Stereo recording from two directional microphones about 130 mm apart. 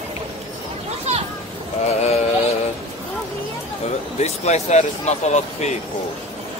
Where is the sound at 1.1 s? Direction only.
55° right (ahead or behind).